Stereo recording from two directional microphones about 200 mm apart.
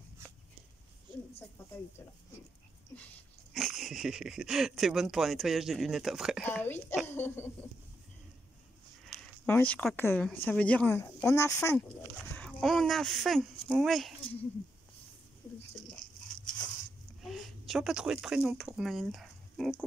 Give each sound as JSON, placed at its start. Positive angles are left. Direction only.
{"t": 1.1, "sound": "a sound", "side_deg": -25}
{"t": 3.5, "sound": "speech", "side_deg": 0}
{"t": 6.6, "sound": "speech", "side_deg": 10}
{"t": 9.5, "sound": "speech", "side_deg": 10}
{"t": 12.4, "sound": "speech", "side_deg": 5}
{"t": 17.2, "sound": "speech", "side_deg": 0}